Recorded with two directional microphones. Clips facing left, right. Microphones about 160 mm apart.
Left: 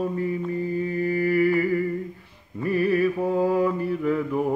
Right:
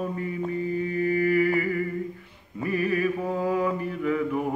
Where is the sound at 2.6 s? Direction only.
35° left (ahead or behind).